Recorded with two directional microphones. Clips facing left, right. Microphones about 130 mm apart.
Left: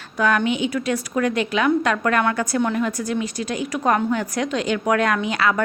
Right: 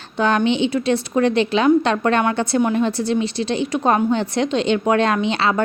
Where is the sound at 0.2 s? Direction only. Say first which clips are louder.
Right 3 dB; 25° right (ahead or behind).